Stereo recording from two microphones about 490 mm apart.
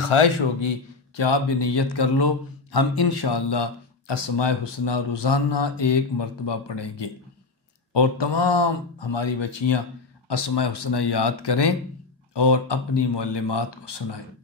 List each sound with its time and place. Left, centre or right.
0.0 s speech: left